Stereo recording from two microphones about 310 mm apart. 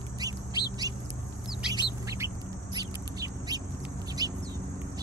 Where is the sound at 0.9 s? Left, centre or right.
Centre.